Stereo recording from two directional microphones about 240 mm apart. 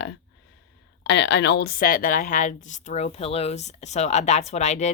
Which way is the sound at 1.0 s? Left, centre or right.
Left.